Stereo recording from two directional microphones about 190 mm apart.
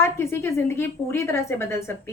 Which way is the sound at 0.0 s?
15° left (ahead or behind).